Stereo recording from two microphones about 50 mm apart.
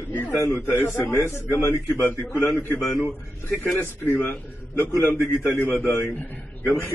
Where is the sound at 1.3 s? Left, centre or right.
Left.